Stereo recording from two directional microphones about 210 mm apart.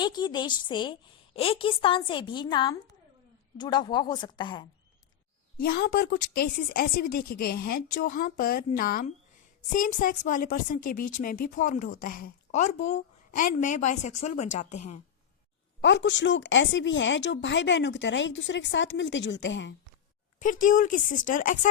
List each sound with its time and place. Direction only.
0.0 s a woman's voice: 20° left (ahead or behind)
5.5 s a woman's voice: 45° left (ahead or behind)
15.8 s a woman's voice: 60° left (ahead or behind)
20.4 s a woman's voice: 40° left (ahead or behind)